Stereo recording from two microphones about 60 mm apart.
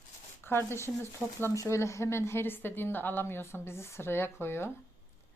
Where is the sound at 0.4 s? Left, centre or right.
Left.